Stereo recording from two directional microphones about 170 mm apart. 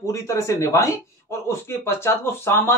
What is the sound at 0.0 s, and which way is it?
Speech, 15° left (ahead or behind).